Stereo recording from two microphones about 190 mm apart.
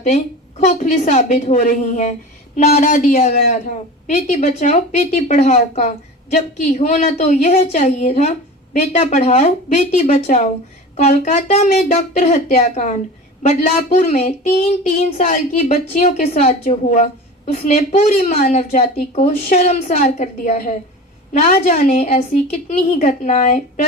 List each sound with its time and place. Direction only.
0.6 s speech: 40° left (ahead or behind)